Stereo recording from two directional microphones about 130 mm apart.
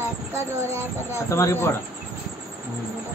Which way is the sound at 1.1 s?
20° left (ahead or behind).